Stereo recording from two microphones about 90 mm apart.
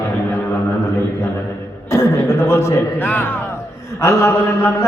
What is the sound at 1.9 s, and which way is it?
Speech, 35° left (ahead or behind).